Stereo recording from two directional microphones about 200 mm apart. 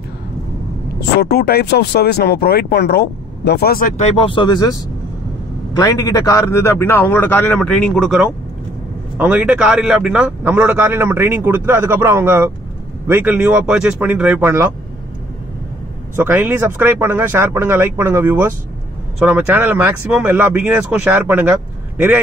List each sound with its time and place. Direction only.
1.2 s a man's voice: 50° left (ahead or behind); by 14.7 s 10° right (ahead or behind)
16.2 s a man's voice: 10° right (ahead or behind)